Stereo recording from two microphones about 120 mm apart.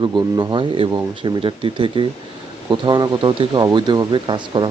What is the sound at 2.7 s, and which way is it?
Speech, 35° right (ahead or behind).